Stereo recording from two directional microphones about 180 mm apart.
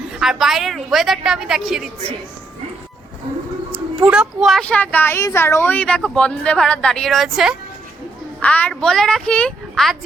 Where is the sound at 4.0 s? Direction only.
5° right (ahead or behind).